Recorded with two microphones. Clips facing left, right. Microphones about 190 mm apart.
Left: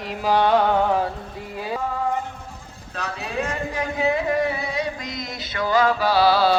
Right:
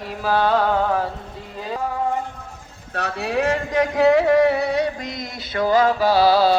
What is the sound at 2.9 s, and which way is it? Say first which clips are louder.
Speech: right 5 dB; 65° right (ahead or behind).